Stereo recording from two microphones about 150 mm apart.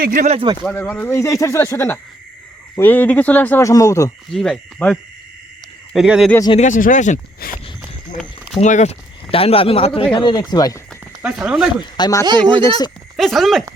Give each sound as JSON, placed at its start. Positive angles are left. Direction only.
{"t": 0.0, "sound": "speech", "side_deg": -65}
{"t": 0.6, "sound": "speech", "side_deg": 15}
{"t": 4.3, "sound": "speech", "side_deg": 5}
{"t": 6.6, "sound": "speech", "side_deg": 60}
{"t": 7.4, "sound": "a sound", "side_deg": 85}
{"t": 8.5, "sound": "speech", "side_deg": 50}
{"t": 11.2, "sound": "speech", "side_deg": -5}
{"t": 11.9, "sound": "speech", "side_deg": 25}
{"t": 12.2, "sound": "speech", "side_deg": -30}
{"t": 13.1, "sound": "speech", "side_deg": 0}